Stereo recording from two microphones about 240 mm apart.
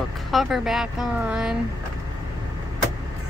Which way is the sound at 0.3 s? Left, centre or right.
Centre.